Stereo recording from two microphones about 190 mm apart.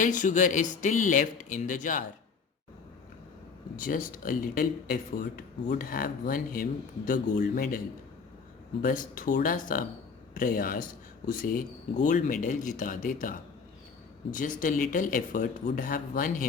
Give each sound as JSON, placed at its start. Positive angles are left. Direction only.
{"t": 0.0, "sound": "speech", "side_deg": 40}
{"t": 3.8, "sound": "speech", "side_deg": 45}
{"t": 8.8, "sound": "speech", "side_deg": 45}